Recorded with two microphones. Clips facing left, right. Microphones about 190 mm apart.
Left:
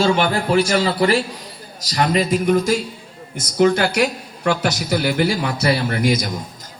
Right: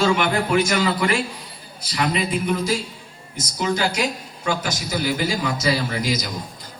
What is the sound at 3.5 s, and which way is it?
A woman's voice, 60° left (ahead or behind).